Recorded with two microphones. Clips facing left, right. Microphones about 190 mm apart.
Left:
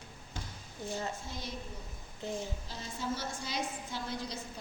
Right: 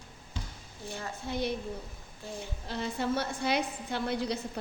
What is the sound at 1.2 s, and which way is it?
Speech, 65° right (ahead or behind).